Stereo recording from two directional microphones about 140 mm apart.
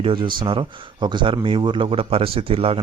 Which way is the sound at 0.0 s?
40° right (ahead or behind).